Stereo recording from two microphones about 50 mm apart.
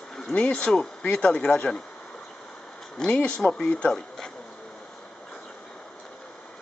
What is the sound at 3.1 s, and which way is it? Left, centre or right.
Speech, left.